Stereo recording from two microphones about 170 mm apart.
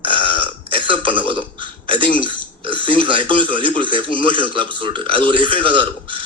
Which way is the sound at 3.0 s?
30° right (ahead or behind).